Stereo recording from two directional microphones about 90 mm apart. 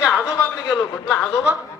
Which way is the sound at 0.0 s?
10° right (ahead or behind).